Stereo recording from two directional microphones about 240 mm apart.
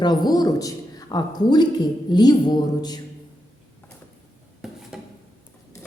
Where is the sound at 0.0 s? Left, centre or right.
Centre.